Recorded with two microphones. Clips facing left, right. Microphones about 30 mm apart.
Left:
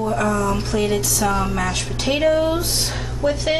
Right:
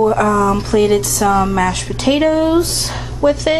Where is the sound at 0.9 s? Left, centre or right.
Right.